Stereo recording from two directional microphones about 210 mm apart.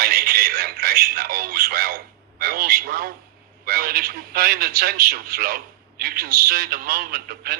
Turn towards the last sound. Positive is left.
turn(degrees=-45)  # may be behind; listen again after turning